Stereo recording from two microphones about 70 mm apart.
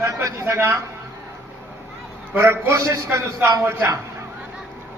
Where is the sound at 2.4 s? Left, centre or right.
Right.